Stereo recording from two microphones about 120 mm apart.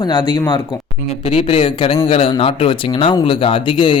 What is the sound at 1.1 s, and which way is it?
Speech, 55° left (ahead or behind).